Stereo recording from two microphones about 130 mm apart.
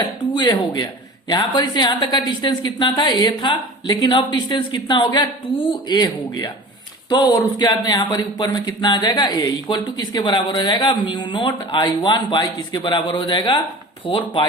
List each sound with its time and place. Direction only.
0.3 s speech: 35° left (ahead or behind)